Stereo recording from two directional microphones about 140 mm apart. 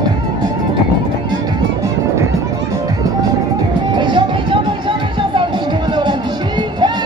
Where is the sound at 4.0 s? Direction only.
35° right (ahead or behind).